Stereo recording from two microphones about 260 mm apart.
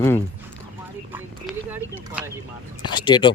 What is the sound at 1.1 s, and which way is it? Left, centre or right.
Speech, centre.